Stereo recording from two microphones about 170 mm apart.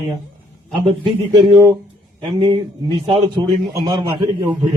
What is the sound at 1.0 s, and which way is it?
A man's voice, 25° right (ahead or behind).